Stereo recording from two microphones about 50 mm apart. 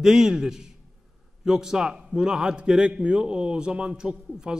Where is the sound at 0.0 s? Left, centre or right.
Centre.